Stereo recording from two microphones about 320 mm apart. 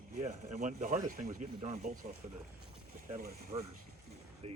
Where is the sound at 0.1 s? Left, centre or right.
Right.